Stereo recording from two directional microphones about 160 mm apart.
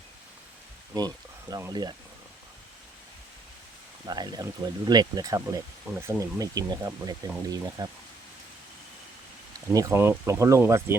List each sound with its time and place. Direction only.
0.9 s speech: 25° right (ahead or behind)
4.0 s speech: 25° right (ahead or behind)
9.7 s speech: 15° right (ahead or behind)